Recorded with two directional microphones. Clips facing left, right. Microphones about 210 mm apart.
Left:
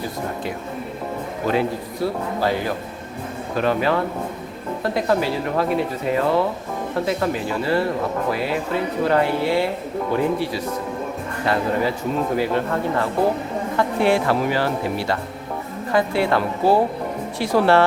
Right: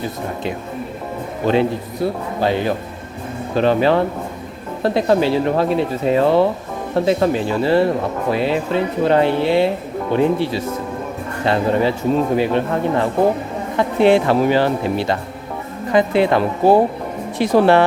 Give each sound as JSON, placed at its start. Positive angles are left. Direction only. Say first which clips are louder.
{"t": 1.5, "sound": "speech", "louder": "right 5 dB", "side_deg": -25}